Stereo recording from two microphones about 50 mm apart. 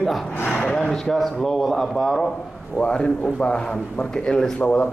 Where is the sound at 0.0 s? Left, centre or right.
Centre.